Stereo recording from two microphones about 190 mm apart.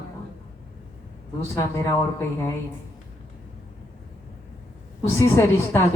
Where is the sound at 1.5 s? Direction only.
15° left (ahead or behind).